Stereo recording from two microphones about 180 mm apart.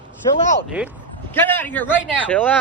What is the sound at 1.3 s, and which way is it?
A man's voice, 10° left (ahead or behind).